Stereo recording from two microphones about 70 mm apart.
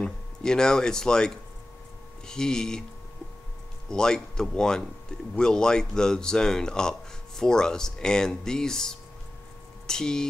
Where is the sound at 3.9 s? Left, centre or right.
Centre.